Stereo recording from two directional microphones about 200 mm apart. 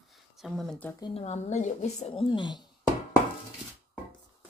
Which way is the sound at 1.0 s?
30° left (ahead or behind).